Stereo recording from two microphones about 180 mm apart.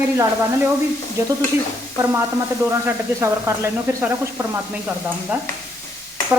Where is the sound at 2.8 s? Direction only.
15° right (ahead or behind).